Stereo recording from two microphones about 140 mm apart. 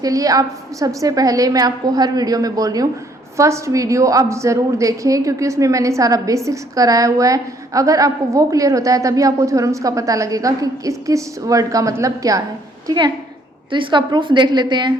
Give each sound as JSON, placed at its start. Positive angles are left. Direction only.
{"t": 0.0, "sound": "a woman's voice", "side_deg": -25}
{"t": 13.7, "sound": "a woman's voice", "side_deg": -35}